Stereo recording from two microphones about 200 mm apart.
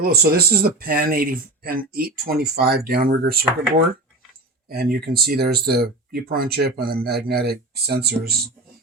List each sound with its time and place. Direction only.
0.0 s speech: 50° right (ahead or behind)
4.7 s speech: 50° right (ahead or behind)